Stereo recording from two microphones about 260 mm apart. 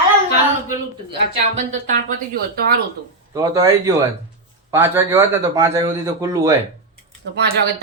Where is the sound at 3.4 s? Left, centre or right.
Centre.